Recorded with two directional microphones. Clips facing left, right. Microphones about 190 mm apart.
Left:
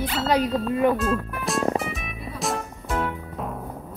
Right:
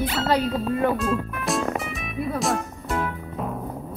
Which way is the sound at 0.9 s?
Centre (ahead or behind).